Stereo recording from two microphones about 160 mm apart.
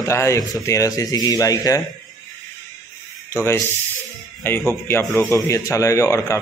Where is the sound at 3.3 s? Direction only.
15° left (ahead or behind).